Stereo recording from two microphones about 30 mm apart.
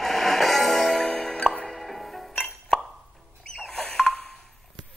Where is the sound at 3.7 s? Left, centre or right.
Centre.